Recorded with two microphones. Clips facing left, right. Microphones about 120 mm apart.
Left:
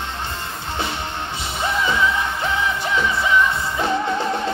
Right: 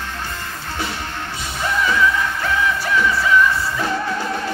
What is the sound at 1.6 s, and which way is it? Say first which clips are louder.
Music: right 2 dB; 20° left (ahead or behind).